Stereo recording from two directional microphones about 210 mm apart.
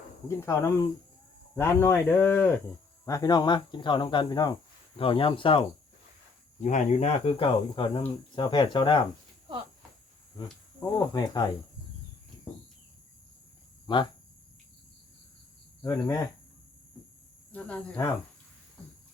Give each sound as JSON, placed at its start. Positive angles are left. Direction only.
{"t": 0.3, "sound": "speech", "side_deg": 15}
{"t": 6.6, "sound": "speech", "side_deg": 35}
{"t": 10.9, "sound": "speech", "side_deg": 20}
{"t": 13.8, "sound": "speech", "side_deg": 20}
{"t": 15.8, "sound": "speech", "side_deg": 15}
{"t": 17.5, "sound": "speech", "side_deg": 5}